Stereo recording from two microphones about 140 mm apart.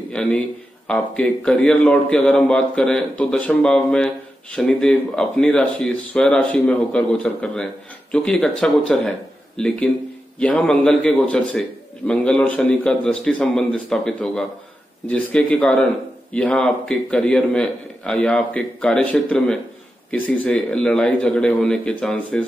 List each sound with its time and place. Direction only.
0.1 s a man's voice: 10° left (ahead or behind)